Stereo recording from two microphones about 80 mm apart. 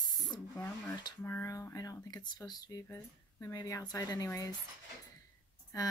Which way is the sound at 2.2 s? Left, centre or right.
Left.